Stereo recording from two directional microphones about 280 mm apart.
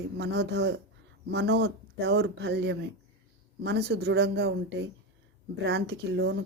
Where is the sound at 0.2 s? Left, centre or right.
Right.